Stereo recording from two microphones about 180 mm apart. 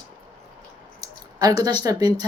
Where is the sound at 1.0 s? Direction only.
20° right (ahead or behind).